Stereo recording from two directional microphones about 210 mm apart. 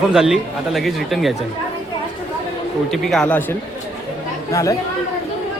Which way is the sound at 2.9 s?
Centre (ahead or behind).